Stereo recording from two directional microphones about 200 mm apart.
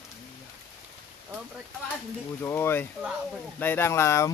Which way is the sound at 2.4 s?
10° left (ahead or behind).